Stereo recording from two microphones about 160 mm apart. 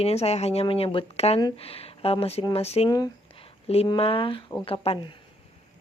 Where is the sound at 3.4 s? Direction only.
40° left (ahead or behind).